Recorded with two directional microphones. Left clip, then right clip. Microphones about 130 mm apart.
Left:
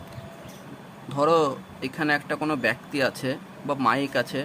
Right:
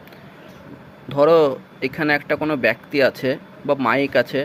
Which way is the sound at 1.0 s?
25° right (ahead or behind).